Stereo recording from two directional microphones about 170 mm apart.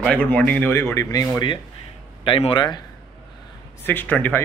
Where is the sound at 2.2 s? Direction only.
30° left (ahead or behind).